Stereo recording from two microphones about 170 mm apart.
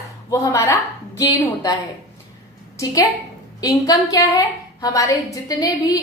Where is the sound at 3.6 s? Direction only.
20° left (ahead or behind).